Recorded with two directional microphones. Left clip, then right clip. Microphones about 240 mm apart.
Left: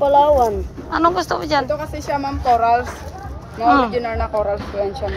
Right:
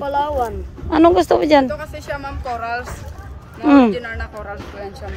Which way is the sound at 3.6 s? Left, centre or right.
Right.